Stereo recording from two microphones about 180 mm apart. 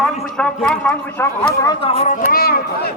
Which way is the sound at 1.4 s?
30° left (ahead or behind).